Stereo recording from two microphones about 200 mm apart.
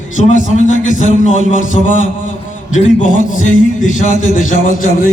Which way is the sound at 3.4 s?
40° left (ahead or behind).